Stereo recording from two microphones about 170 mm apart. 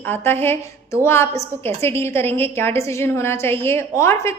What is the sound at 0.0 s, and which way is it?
A woman's voice, 10° left (ahead or behind).